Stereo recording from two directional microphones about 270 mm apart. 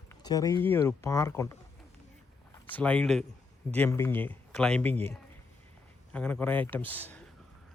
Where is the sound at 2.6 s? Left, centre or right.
Centre.